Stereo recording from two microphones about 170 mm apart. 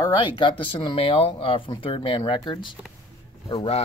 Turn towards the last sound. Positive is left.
turn(degrees=35)  # may be behind; listen again after turning